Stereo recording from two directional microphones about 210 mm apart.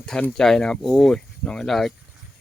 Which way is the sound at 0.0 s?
5° left (ahead or behind).